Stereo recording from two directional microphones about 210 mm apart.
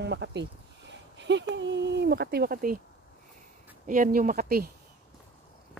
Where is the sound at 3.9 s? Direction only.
40° right (ahead or behind).